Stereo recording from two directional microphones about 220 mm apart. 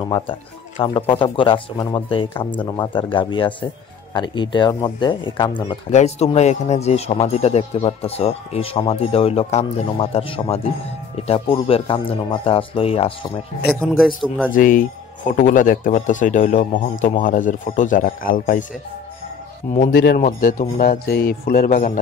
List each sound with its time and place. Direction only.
0.0 s speech: 25° left (ahead or behind)
13.7 s a man's voice: centre (ahead or behind)
14.5 s a man's voice: 40° left (ahead or behind)
19.7 s a man's voice: 30° left (ahead or behind)